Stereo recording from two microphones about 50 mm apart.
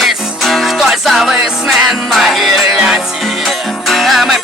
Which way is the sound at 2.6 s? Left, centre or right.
Centre.